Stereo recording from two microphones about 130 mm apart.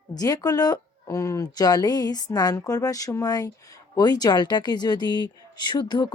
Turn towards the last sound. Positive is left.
turn(degrees=35)  # may be behind; listen again after turning